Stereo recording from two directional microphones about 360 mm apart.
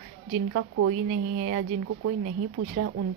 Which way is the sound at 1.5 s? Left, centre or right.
Right.